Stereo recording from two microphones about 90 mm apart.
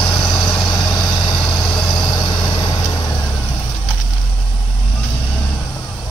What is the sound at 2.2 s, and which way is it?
Vehicle, 60° left (ahead or behind).